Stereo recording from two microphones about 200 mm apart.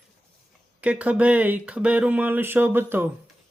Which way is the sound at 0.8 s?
5° right (ahead or behind).